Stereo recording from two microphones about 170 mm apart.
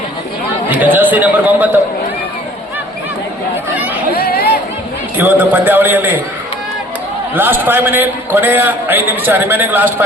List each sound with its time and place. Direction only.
0.7 s speech: 10° right (ahead or behind)
4.1 s chatter: 65° left (ahead or behind)
5.1 s a man's voice: 10° right (ahead or behind)
7.3 s a man's voice: 10° right (ahead or behind)